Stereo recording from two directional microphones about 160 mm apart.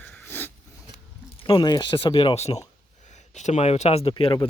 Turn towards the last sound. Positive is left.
turn(degrees=35)  # may be behind; listen again after turning